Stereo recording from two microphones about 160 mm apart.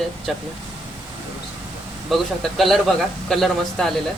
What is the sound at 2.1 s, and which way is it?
Speech, centre (ahead or behind).